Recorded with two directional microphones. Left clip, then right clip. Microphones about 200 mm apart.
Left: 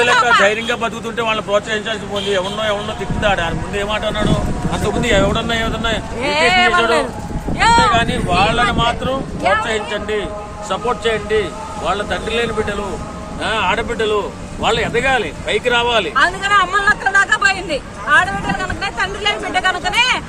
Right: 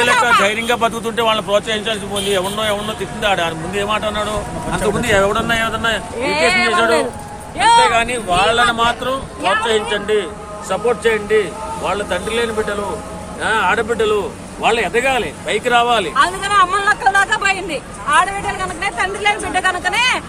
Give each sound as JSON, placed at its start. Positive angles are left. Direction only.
{"t": 0.4, "sound": "speech", "side_deg": -35}
{"t": 3.8, "sound": "speech", "side_deg": -20}
{"t": 6.2, "sound": "speech", "side_deg": 10}
{"t": 7.9, "sound": "speech", "side_deg": -15}
{"t": 16.1, "sound": "speech", "side_deg": 5}